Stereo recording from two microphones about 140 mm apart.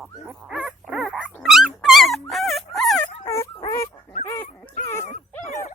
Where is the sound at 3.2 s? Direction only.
25° left (ahead or behind).